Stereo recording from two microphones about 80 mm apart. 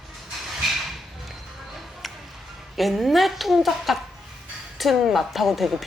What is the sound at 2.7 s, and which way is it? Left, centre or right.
A woman's voice, centre.